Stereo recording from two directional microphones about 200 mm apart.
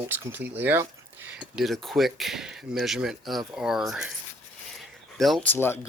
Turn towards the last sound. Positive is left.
turn(degrees=10)  # may be behind; listen again after turning